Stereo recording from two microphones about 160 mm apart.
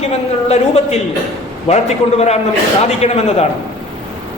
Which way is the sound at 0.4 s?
40° left (ahead or behind).